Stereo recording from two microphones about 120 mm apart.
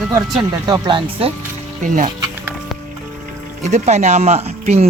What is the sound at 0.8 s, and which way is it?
Speech, 45° right (ahead or behind).